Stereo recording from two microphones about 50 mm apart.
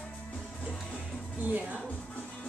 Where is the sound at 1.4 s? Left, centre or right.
Right.